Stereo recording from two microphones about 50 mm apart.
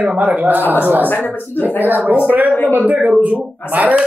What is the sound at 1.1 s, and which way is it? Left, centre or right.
Speech, left.